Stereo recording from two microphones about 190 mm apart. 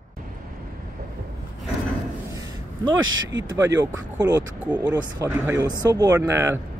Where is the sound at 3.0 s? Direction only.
90° right.